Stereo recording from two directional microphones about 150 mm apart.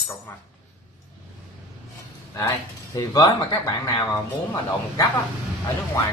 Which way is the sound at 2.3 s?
25° left (ahead or behind).